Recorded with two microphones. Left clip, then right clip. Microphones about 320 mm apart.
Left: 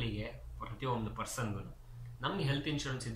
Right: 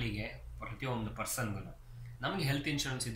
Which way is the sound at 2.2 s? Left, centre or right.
Centre.